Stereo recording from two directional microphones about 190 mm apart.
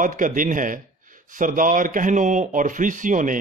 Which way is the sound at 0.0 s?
45° right (ahead or behind).